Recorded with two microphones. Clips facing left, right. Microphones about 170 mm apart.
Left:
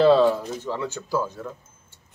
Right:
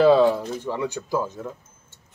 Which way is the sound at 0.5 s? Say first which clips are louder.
Right 2 dB; 15° right (ahead or behind).